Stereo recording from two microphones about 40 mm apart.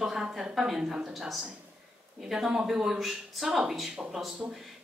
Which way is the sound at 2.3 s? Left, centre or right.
Centre.